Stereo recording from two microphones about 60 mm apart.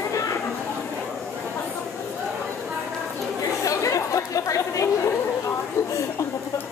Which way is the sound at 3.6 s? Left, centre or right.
Left.